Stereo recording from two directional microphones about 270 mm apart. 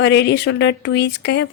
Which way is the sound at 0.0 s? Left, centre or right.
Left.